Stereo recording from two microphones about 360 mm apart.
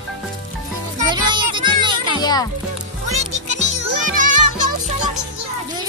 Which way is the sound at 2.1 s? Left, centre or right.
Centre.